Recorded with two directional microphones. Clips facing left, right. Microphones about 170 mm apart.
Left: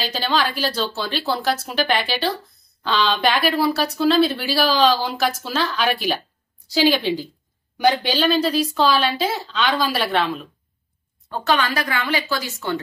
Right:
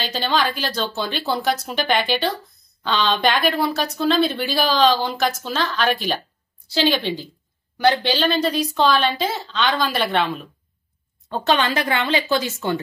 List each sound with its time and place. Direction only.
0.0 s a woman's voice: centre (ahead or behind)
11.2 s speech: 20° right (ahead or behind)